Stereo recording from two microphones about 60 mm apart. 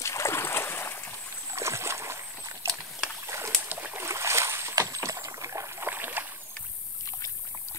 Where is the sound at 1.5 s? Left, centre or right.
Right.